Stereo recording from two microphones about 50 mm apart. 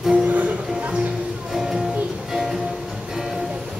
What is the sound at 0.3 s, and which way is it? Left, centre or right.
Music, right.